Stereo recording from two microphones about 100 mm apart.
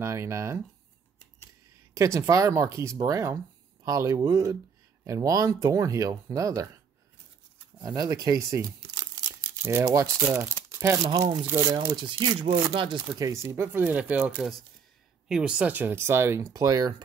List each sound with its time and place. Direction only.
0.0 s speech: 30° right (ahead or behind)
2.0 s speech: 30° right (ahead or behind)
7.8 s speech: 35° right (ahead or behind)
11.1 s speech: 50° right (ahead or behind)
13.2 s speech: 30° right (ahead or behind)
13.8 s a woman's voice: 15° right (ahead or behind)
15.7 s speech: 25° right (ahead or behind)
16.5 s speech: 35° right (ahead or behind)